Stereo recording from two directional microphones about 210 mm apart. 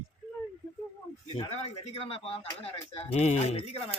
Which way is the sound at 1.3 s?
30° left (ahead or behind).